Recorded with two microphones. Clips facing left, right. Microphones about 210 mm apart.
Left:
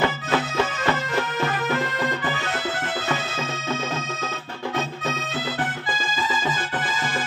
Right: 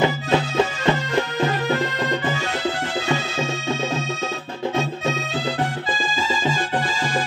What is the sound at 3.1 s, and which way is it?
Music, 30° right (ahead or behind).